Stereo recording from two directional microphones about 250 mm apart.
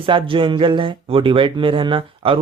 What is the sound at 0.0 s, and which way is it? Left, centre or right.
Speech, right.